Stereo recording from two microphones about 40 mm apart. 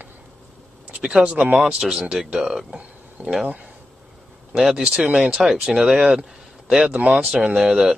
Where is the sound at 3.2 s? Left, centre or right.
Right.